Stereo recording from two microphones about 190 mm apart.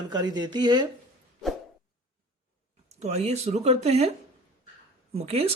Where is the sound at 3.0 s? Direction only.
35° right (ahead or behind).